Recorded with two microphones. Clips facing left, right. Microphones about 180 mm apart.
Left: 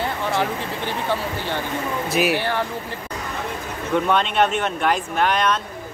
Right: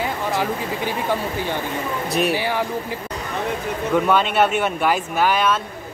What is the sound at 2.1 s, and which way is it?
Speech, centre (ahead or behind).